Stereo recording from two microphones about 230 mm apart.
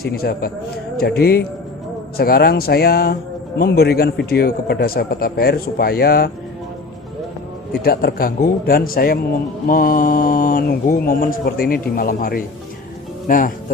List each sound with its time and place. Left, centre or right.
0.0 s a man's voice: left
7.9 s a man's voice: left